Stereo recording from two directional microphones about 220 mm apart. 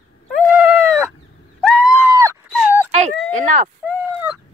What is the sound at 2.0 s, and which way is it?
Dog, 15° right (ahead or behind).